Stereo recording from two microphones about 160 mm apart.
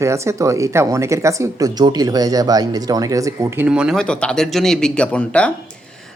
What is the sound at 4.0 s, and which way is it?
Speech, 5° left (ahead or behind).